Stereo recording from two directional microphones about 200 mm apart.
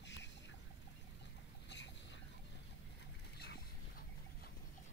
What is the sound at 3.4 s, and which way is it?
Boat, 50° left (ahead or behind).